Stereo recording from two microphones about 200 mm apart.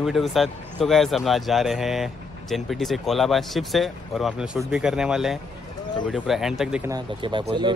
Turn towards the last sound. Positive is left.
turn(degrees=-25)  # may be behind; listen again after turning